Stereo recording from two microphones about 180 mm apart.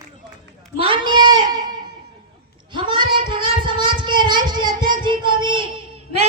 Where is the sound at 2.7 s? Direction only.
25° right (ahead or behind).